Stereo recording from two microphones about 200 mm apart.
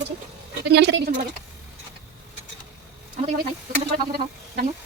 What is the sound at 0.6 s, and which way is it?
Speech, 55° right (ahead or behind).